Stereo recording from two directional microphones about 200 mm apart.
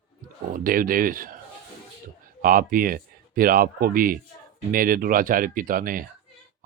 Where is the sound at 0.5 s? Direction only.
45° right (ahead or behind).